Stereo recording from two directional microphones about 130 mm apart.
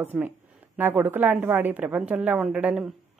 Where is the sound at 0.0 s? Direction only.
15° right (ahead or behind).